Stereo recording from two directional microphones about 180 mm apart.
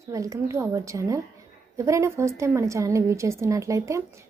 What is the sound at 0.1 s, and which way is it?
A woman's voice, 20° right (ahead or behind).